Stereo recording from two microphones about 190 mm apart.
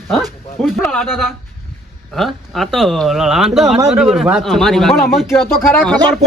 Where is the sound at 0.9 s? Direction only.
Centre (ahead or behind).